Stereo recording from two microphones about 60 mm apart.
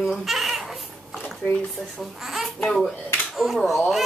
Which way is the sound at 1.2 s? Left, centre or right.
Left.